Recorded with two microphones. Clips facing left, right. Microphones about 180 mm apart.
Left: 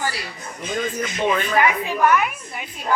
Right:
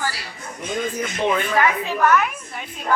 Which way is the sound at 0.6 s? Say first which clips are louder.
Even; centre (ahead or behind).